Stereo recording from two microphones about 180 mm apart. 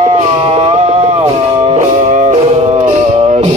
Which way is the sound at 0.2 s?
35° right (ahead or behind).